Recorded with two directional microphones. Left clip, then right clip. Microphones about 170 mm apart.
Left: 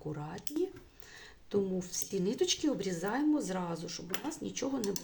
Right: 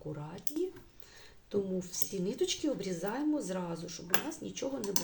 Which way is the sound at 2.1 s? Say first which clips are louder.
Left 2 dB; 30° left (ahead or behind).